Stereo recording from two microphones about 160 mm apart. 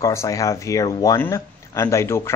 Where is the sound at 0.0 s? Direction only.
20° left (ahead or behind).